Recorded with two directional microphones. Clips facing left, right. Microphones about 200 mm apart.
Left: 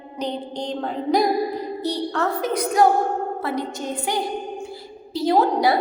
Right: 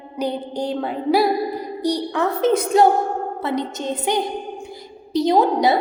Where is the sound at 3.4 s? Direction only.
20° right (ahead or behind).